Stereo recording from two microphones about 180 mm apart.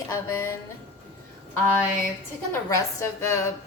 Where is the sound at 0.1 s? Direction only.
15° left (ahead or behind).